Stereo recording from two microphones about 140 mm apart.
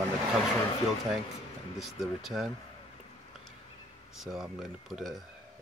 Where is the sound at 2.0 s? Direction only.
Centre (ahead or behind).